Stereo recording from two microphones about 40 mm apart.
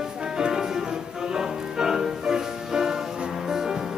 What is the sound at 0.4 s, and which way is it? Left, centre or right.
Music, centre.